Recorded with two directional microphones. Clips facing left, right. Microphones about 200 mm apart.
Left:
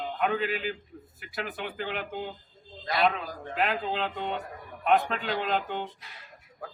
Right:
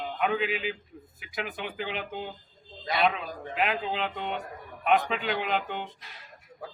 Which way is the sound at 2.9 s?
Centre (ahead or behind).